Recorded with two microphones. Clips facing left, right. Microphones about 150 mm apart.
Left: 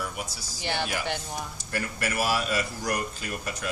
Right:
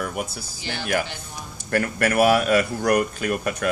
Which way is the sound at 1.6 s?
60° right (ahead or behind).